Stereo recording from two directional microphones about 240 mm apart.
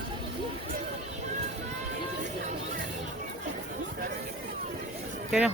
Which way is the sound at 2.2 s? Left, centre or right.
Right.